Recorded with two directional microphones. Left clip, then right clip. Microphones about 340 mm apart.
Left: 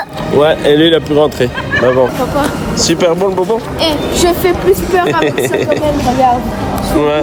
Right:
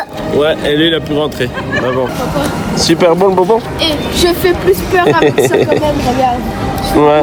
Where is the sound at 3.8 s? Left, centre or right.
Left.